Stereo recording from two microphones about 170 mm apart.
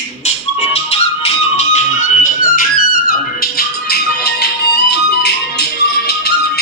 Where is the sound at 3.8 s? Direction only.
70° left (ahead or behind).